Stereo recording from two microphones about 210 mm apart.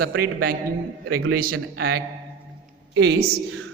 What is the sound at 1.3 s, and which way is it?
Speech, 45° right (ahead or behind).